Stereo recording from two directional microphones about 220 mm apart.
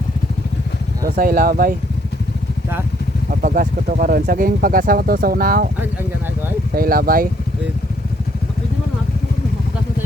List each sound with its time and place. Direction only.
1.1 s speech: 40° right (ahead or behind)
3.4 s speech: 40° right (ahead or behind)
6.7 s speech: 40° right (ahead or behind)